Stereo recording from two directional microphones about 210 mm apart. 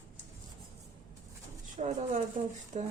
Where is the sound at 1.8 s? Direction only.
35° right (ahead or behind).